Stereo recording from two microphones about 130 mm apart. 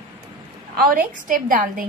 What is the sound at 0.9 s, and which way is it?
A woman's voice, 90° right.